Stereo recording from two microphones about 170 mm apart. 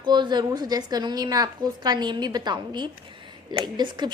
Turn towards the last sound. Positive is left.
turn(degrees=-25)  # may be behind; listen again after turning